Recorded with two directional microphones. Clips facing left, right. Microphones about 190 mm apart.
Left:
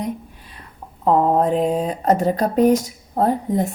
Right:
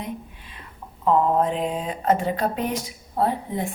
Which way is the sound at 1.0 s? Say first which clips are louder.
Left 3 dB; 40° left (ahead or behind).